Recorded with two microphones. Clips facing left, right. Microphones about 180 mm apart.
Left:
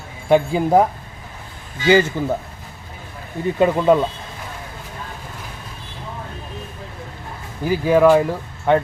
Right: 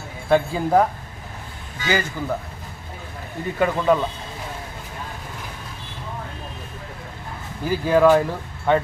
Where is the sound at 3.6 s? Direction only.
20° left (ahead or behind).